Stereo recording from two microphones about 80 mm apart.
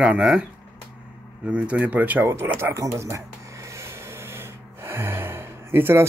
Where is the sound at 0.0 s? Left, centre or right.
Centre; by 2.7 s right.